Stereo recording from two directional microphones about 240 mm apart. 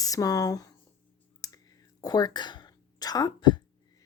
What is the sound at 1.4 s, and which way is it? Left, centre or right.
Clicking, centre.